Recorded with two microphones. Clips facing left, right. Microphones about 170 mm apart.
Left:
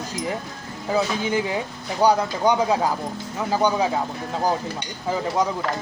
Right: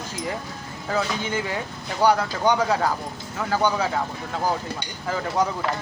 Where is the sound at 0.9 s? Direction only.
15° left (ahead or behind).